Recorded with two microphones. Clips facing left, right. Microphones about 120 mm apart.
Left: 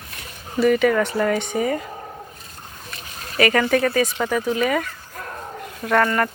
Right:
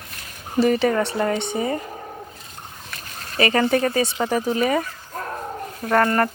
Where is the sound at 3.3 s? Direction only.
30° right (ahead or behind).